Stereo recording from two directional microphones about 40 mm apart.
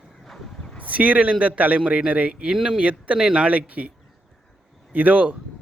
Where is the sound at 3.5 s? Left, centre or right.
Right.